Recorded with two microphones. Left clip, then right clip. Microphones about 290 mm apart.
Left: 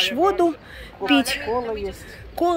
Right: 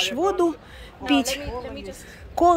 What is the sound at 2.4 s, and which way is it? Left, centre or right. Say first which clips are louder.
Speech: right 4 dB; centre.